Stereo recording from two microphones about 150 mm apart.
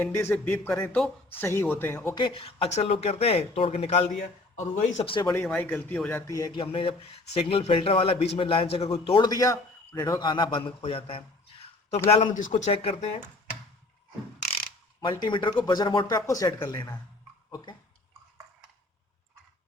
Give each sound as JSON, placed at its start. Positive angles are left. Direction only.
{"t": 0.0, "sound": "a man's voice", "side_deg": 15}
{"t": 2.1, "sound": "a man's voice", "side_deg": 35}
{"t": 5.0, "sound": "a man's voice", "side_deg": 35}
{"t": 5.5, "sound": "a man's voice", "side_deg": 10}
{"t": 6.6, "sound": "a man's voice", "side_deg": 35}
{"t": 12.5, "sound": "speech", "side_deg": 45}
{"t": 15.0, "sound": "speech", "side_deg": 30}